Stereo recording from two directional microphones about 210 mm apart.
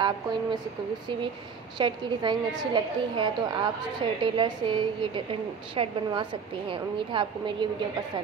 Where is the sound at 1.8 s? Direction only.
20° right (ahead or behind).